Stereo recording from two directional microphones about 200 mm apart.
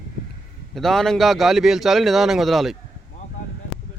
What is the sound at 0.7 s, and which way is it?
A man's voice, centre (ahead or behind).